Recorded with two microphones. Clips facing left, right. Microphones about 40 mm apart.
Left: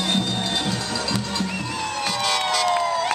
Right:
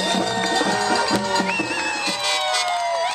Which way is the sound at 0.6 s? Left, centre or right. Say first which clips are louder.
Right 6 dB; right.